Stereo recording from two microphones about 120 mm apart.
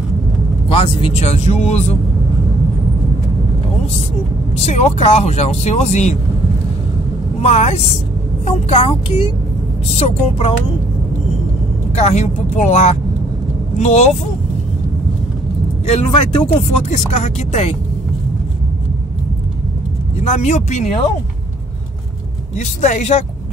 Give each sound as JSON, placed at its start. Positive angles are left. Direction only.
{"t": 0.7, "sound": "speech", "side_deg": 50}
{"t": 4.6, "sound": "speech", "side_deg": 70}
{"t": 7.4, "sound": "speech", "side_deg": 60}
{"t": 9.8, "sound": "speech", "side_deg": 65}
{"t": 11.9, "sound": "speech", "side_deg": 70}
{"t": 15.9, "sound": "speech", "side_deg": 55}
{"t": 16.9, "sound": "speech", "side_deg": 70}
{"t": 20.2, "sound": "speech", "side_deg": 75}
{"t": 22.6, "sound": "speech", "side_deg": 70}